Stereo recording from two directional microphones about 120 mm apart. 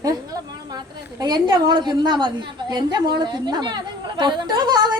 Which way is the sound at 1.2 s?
35° right (ahead or behind).